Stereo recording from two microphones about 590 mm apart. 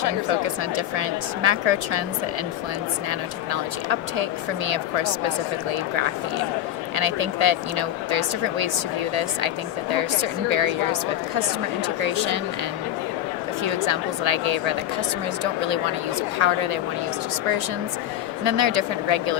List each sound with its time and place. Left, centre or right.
0.0 s speech: right
3.1 s speech: right
6.9 s speech: right
10.5 s speech: right
12.0 s speech: right
13.7 s speech: right
18.4 s speech: right